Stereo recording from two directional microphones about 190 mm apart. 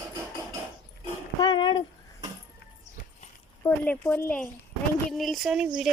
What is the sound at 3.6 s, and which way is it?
Speech, 10° left (ahead or behind).